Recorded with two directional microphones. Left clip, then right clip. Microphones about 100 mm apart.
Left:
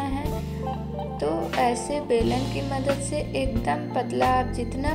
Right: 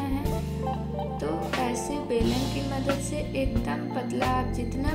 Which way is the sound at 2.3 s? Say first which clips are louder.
Left 2 dB; centre (ahead or behind).